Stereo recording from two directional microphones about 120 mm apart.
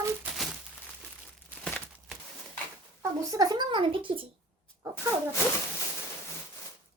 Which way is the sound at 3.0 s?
30° right (ahead or behind).